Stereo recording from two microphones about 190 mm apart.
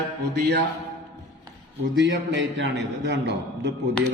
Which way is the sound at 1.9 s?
70° right (ahead or behind).